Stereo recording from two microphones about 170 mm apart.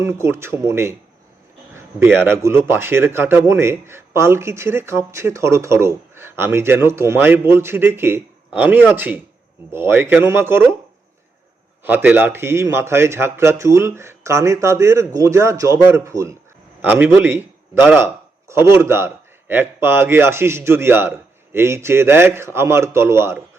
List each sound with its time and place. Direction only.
0.0 s a man's voice: 15° right (ahead or behind)
11.8 s a man's voice: 10° right (ahead or behind)